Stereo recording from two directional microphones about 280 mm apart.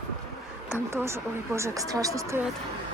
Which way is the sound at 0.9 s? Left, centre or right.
Centre.